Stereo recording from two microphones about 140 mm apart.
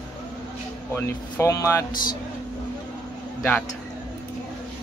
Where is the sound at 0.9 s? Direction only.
20° left (ahead or behind).